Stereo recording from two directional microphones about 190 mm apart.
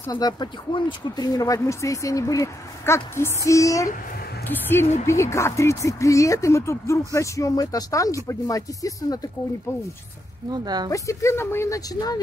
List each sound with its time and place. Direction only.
0.0 s speech: 20° left (ahead or behind)
10.5 s speech: 20° right (ahead or behind)
10.9 s speech: 15° left (ahead or behind)